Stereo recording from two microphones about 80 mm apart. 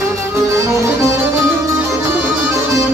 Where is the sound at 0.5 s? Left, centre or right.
Right.